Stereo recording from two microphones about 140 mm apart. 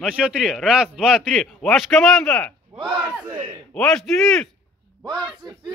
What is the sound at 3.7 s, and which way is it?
Speech, 5° left (ahead or behind).